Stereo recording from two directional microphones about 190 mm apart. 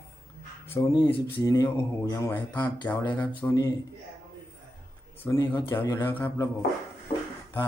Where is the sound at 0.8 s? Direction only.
15° left (ahead or behind).